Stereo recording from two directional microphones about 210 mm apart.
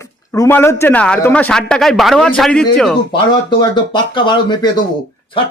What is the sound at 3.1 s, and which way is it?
Speech, 20° left (ahead or behind).